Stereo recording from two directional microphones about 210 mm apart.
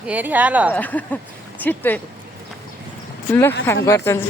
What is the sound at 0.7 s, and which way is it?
Speech, 10° left (ahead or behind).